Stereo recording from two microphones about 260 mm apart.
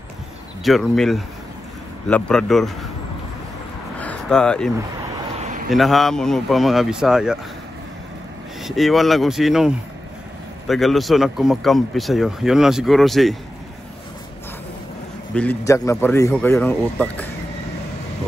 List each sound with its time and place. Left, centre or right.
0.7 s speech: centre
4.0 s a sound: centre
5.4 s a sound: right
5.7 s speech: centre
8.6 s speech: centre
10.7 s speech: centre
15.3 s a man's voice: centre